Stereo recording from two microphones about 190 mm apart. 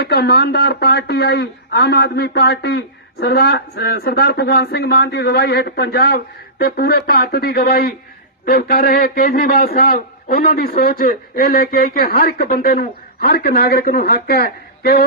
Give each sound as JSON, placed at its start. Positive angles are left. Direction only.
{"t": 0.0, "sound": "a man's voice", "side_deg": 55}